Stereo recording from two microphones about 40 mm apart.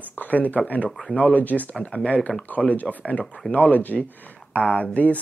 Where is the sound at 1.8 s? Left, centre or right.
Left.